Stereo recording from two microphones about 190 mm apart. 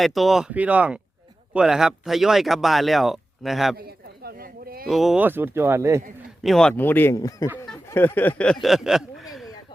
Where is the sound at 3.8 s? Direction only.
55° right (ahead or behind).